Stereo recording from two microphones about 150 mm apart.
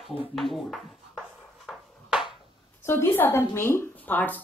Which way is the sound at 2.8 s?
15° left (ahead or behind).